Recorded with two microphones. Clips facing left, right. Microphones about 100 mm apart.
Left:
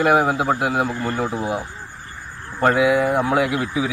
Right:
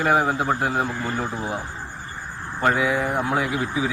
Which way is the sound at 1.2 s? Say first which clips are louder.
Left 4 dB; 15° left (ahead or behind).